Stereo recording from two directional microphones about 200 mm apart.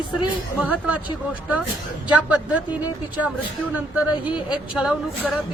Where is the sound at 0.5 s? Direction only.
5° right (ahead or behind).